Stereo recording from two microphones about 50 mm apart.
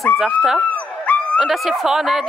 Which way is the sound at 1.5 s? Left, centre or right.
Centre.